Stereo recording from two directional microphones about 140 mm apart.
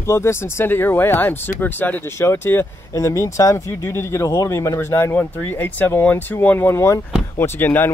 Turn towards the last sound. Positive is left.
turn(degrees=15)  # may be behind; listen again after turning